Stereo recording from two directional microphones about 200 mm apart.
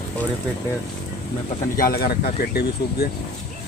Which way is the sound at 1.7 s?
50° left (ahead or behind).